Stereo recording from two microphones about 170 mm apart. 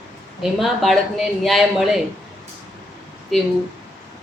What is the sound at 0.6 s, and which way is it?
A woman's voice, centre (ahead or behind).